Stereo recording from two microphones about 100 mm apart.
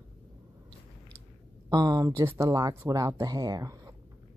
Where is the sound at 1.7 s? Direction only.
40° right (ahead or behind).